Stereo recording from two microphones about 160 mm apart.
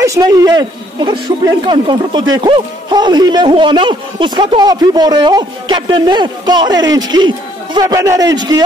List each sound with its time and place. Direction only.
0.0 s speech: 20° right (ahead or behind)